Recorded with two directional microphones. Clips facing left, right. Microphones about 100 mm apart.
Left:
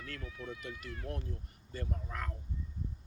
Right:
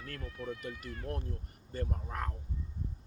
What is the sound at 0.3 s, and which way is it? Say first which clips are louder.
Speech: right 6 dB; centre (ahead or behind).